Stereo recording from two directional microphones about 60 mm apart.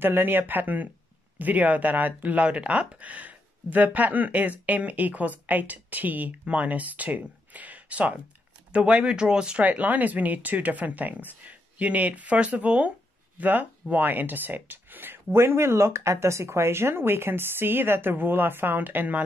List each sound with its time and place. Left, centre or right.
0.0 s speech: right; by 9.7 s centre
9.7 s speech: right
15.3 s speech: right